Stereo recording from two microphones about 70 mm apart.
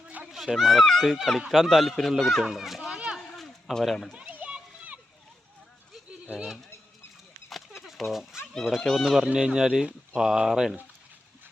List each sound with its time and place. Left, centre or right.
0.3 s speech: centre
3.2 s a sound: centre
4.1 s children playing: centre
4.5 s splash: centre
7.5 s a sound: centre
8.8 s speech: centre
9.0 s speech: centre